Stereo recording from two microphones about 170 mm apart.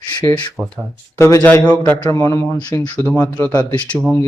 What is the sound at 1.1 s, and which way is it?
Speech, 15° left (ahead or behind).